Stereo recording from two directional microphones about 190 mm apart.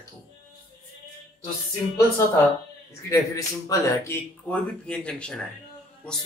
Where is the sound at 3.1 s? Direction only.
15° left (ahead or behind).